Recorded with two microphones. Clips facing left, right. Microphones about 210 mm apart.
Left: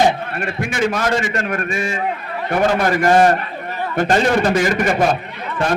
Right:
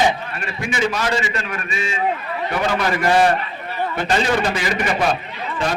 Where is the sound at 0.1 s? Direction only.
55° left (ahead or behind).